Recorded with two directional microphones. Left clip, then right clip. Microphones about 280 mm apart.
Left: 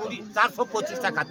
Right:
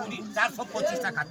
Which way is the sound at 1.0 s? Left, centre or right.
Left.